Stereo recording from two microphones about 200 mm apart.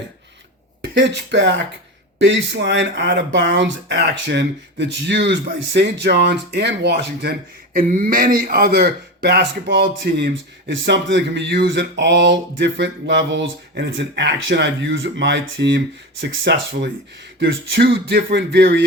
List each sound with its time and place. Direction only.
0.8 s speech: 60° right (ahead or behind)